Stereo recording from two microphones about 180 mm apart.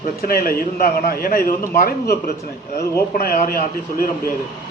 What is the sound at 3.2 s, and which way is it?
Speech, 55° left (ahead or behind).